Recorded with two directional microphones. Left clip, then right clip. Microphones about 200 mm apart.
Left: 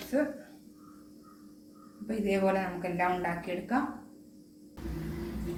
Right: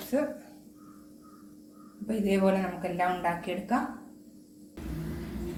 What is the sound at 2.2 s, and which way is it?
A woman's voice, 30° right (ahead or behind).